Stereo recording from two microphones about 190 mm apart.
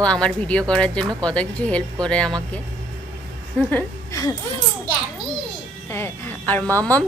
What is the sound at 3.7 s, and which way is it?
Speech, 15° left (ahead or behind).